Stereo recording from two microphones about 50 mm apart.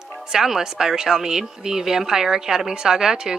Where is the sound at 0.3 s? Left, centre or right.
Centre.